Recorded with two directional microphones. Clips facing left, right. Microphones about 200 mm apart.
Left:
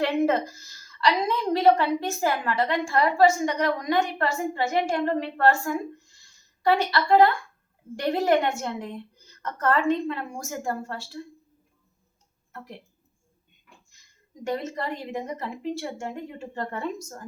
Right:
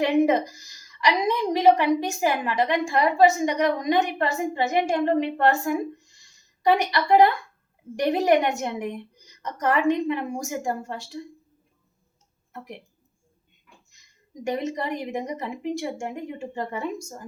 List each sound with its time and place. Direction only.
0.0 s a woman's voice: 15° right (ahead or behind)
12.5 s a woman's voice: 15° right (ahead or behind)
14.4 s a woman's voice: 15° right (ahead or behind)